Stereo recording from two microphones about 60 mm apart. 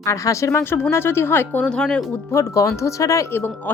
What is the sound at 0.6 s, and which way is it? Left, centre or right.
Speech, left.